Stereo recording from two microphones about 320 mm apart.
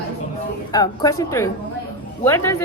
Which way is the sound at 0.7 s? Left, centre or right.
Centre.